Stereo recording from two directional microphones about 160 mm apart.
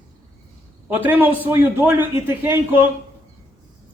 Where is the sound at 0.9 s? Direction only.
10° right (ahead or behind).